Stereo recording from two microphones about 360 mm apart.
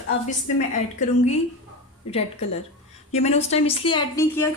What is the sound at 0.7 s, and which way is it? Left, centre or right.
Speech, centre.